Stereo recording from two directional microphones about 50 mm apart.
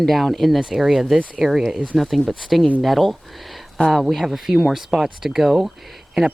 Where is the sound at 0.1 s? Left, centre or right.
Centre.